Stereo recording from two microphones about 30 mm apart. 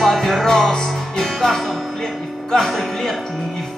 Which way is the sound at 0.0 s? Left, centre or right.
Centre.